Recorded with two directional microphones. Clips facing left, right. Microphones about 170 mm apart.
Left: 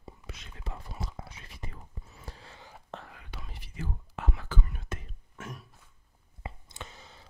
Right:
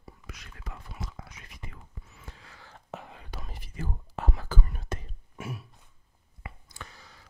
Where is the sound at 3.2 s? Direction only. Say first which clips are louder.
Right 3 dB; 40° right (ahead or behind).